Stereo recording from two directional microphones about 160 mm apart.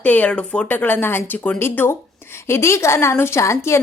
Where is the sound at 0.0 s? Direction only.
10° left (ahead or behind).